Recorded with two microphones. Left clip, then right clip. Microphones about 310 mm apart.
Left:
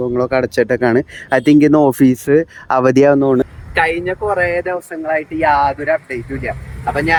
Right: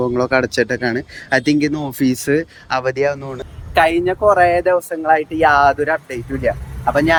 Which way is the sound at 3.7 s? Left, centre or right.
Centre.